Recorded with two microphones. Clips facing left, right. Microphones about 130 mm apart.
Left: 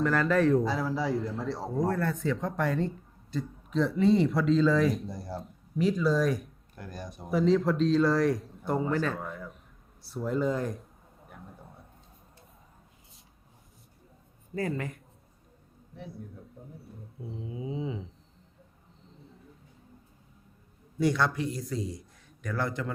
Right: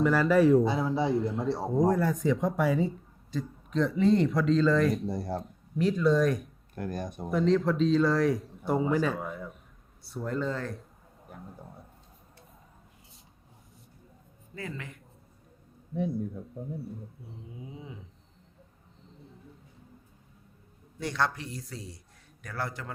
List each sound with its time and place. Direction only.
0.0 s a man's voice: 5° right (ahead or behind)
0.6 s a man's voice: 25° right (ahead or behind); by 5.1 s centre (ahead or behind)
5.1 s speech: 50° right (ahead or behind)
5.5 s speech: centre (ahead or behind)
6.7 s speech: 50° right (ahead or behind)
7.3 s a man's voice: centre (ahead or behind)
10.5 s speech: 15° left (ahead or behind)
11.5 s a sound: centre (ahead or behind)
14.5 s speech: 45° left (ahead or behind)
17.5 s dog: 90° left